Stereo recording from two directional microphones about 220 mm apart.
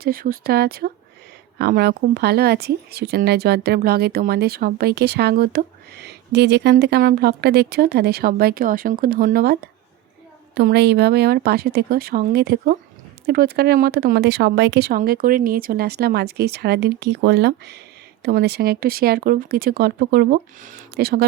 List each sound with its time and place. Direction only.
0.0 s speech: 40° right (ahead or behind)